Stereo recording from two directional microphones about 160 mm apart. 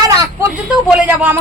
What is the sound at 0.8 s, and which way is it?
Speech, 10° right (ahead or behind).